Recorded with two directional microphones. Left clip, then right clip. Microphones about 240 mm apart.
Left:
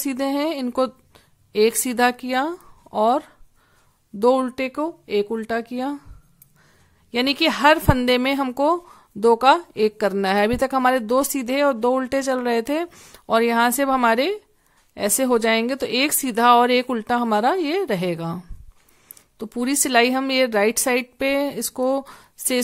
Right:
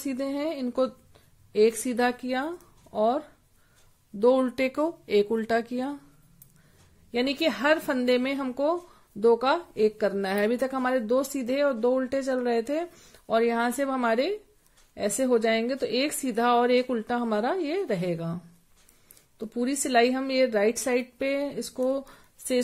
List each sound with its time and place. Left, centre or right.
0.0 s speech: left
7.1 s a woman's voice: left